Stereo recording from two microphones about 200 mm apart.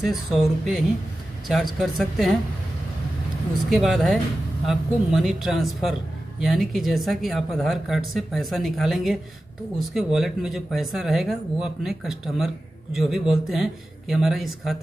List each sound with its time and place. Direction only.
0.0 s speech: centre (ahead or behind)
3.7 s speech: centre (ahead or behind)